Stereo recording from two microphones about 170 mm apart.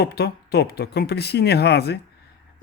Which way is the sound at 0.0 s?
70° left (ahead or behind).